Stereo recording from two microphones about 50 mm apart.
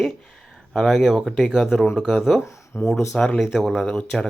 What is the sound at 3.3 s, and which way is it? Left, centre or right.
Speech, centre.